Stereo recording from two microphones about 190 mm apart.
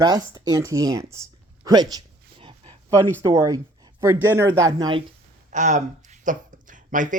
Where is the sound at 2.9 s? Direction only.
15° right (ahead or behind).